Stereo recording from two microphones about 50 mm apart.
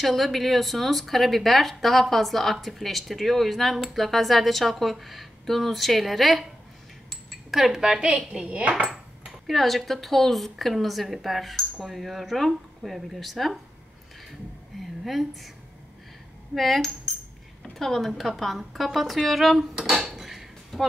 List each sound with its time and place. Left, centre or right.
0.0 s a woman's voice: centre
7.1 s cutlery: centre
8.3 s dishes: right
9.5 s a woman's voice: centre
15.0 s a woman's voice: centre
16.5 s a woman's voice: centre
20.2 s a sound: centre